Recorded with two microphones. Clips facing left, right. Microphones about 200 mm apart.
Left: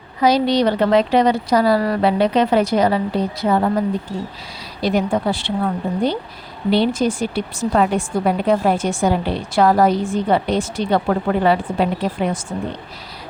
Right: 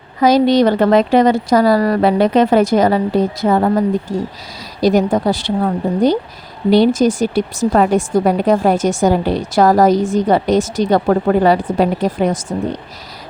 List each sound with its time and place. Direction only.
0.2 s a woman's voice: 45° right (ahead or behind)
4.8 s a woman's voice: 40° right (ahead or behind)